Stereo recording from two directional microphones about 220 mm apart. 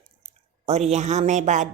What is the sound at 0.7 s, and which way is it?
Speech, 30° right (ahead or behind).